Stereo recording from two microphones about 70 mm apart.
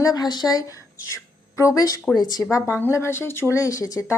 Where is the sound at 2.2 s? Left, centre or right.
Left.